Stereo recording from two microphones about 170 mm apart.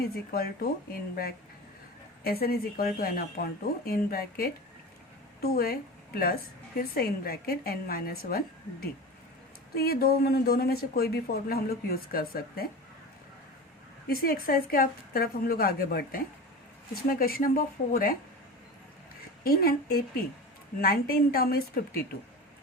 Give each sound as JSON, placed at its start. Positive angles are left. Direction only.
{"t": 0.0, "sound": "speech", "side_deg": 65}
{"t": 2.2, "sound": "a woman's voice", "side_deg": 65}
{"t": 9.7, "sound": "speech", "side_deg": 65}
{"t": 14.1, "sound": "speech", "side_deg": 60}
{"t": 19.5, "sound": "speech", "side_deg": 60}